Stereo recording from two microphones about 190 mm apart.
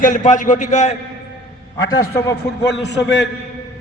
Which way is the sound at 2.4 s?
65° left (ahead or behind).